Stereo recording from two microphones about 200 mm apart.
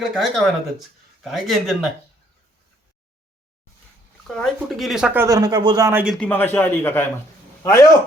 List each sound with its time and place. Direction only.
0.0 s speech: centre (ahead or behind)
4.3 s speech: centre (ahead or behind)
6.1 s a man's voice: 10° left (ahead or behind)